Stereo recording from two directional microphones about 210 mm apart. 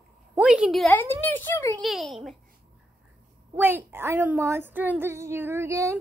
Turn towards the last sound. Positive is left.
turn(degrees=-15)  # may be behind; listen again after turning